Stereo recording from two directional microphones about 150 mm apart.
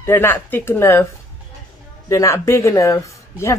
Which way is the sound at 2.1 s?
20° left (ahead or behind).